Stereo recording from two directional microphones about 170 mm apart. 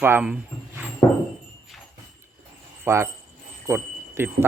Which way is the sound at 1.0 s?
20° left (ahead or behind).